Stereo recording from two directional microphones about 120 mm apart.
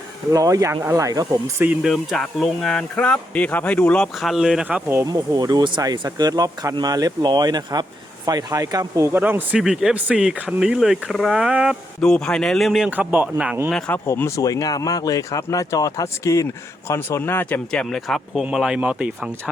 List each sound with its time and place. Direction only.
0.3 s speech: 30° right (ahead or behind)
1.8 s speech: centre (ahead or behind)
5.0 s speech: 30° right (ahead or behind); by 11.8 s 5° right (ahead or behind)
11.9 s speech: 5° left (ahead or behind); by 13.6 s 10° right (ahead or behind)
13.7 s speech: 5° left (ahead or behind)
14.1 s speech: 25° left (ahead or behind)
17.7 s speech: 5° left (ahead or behind)